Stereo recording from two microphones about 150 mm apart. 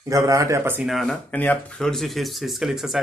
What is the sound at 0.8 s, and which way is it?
Speech, centre (ahead or behind).